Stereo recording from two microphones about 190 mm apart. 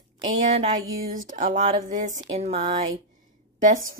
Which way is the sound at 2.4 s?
30° right (ahead or behind).